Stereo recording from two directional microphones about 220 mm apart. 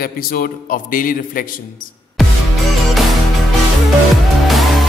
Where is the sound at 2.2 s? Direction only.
Centre (ahead or behind).